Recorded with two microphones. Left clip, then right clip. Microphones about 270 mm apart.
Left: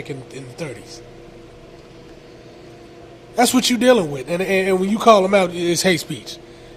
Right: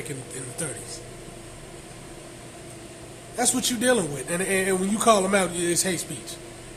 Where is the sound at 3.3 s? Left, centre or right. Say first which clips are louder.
Left 9 dB; left.